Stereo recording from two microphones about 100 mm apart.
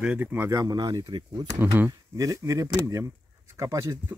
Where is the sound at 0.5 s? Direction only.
40° right (ahead or behind).